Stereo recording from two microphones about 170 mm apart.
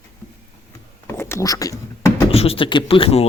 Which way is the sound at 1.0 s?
15° left (ahead or behind).